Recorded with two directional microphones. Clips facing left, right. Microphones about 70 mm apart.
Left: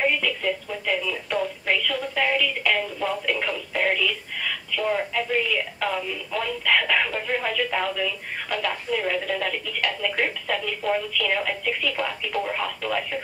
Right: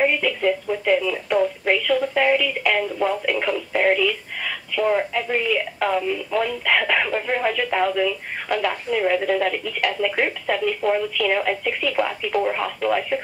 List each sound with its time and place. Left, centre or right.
0.0 s radio: centre